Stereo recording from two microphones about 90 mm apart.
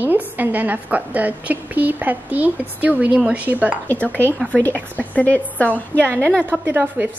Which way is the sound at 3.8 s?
20° left (ahead or behind).